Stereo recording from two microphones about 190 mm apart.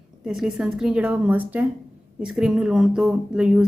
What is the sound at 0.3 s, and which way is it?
A woman's voice, 5° right (ahead or behind).